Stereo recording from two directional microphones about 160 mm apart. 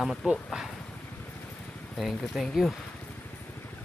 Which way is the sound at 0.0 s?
Centre (ahead or behind).